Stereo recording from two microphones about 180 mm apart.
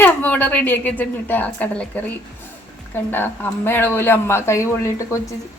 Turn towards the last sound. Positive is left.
turn(degrees=15)  # may be behind; listen again after turning